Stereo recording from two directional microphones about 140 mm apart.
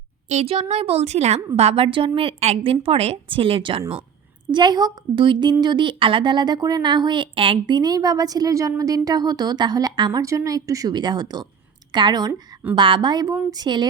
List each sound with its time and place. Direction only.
0.3 s a woman's voice: 45° right (ahead or behind); by 13.8 s 30° right (ahead or behind)